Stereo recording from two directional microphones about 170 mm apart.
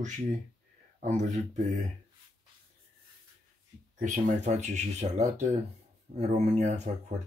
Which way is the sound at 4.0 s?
45° right (ahead or behind).